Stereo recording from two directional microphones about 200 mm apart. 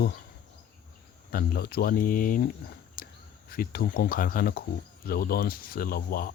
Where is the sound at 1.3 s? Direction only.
50° left (ahead or behind).